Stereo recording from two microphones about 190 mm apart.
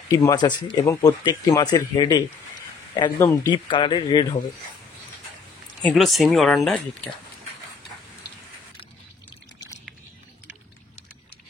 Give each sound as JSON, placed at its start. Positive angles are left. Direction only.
{"t": 0.1, "sound": "speech", "side_deg": 20}
{"t": 5.8, "sound": "speech", "side_deg": 5}